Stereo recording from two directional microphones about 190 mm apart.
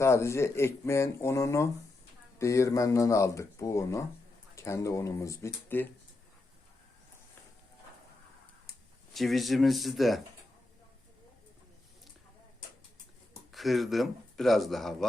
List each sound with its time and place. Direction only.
0.0 s speech: 15° left (ahead or behind)
9.1 s speech: centre (ahead or behind)
13.5 s speech: centre (ahead or behind)